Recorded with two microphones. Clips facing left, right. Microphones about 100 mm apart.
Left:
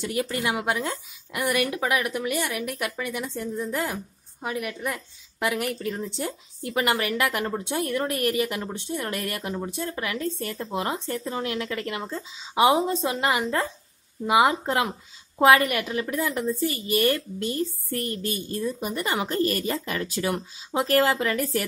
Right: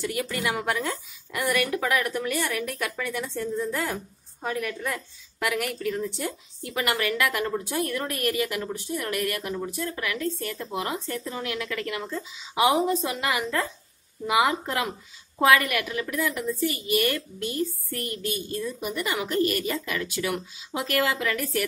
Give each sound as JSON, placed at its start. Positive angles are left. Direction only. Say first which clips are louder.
{"t": 0.0, "sound": "a woman's voice", "louder": "left 1 dB", "side_deg": 25}